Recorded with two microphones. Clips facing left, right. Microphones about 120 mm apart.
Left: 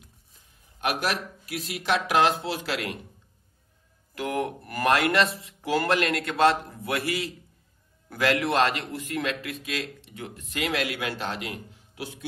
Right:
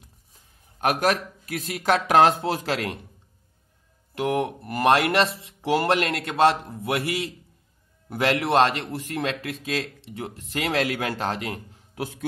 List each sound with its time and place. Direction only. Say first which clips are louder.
0.7 s speech: right 5 dB; 40° right (ahead or behind)
4.2 s speech: right 4 dB; 25° right (ahead or behind); by 12.3 s 45° right (ahead or behind)